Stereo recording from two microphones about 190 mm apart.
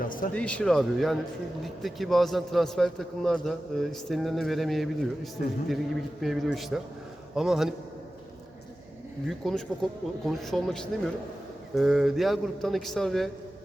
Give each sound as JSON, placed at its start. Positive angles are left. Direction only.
{"t": 0.0, "sound": "speech", "side_deg": 45}
{"t": 0.3, "sound": "a man's voice", "side_deg": 5}
{"t": 9.4, "sound": "a man's voice", "side_deg": 0}